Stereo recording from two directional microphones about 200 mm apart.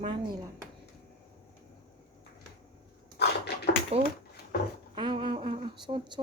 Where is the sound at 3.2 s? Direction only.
55° left (ahead or behind).